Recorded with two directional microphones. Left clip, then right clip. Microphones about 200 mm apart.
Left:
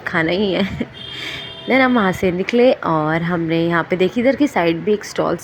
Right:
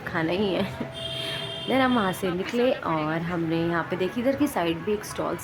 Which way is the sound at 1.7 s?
25° left (ahead or behind).